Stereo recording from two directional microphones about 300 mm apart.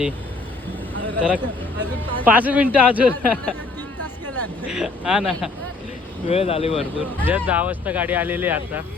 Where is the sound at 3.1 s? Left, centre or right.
Centre.